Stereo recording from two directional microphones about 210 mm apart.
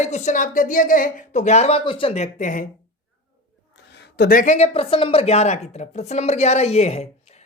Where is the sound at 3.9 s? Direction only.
55° left (ahead or behind).